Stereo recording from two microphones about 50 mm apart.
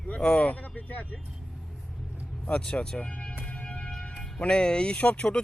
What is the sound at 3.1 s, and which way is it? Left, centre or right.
Music, left.